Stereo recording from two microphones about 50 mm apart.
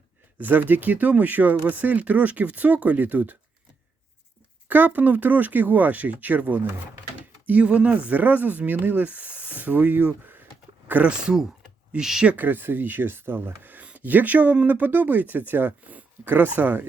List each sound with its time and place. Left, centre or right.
0.3 s speech: right
4.7 s speech: right
11.0 s speech: centre
12.4 s speech: right